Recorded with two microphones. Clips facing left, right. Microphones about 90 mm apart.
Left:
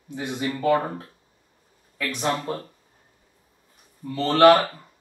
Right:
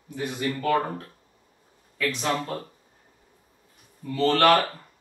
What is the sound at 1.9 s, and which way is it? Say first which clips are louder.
Speech: even; 20° left (ahead or behind).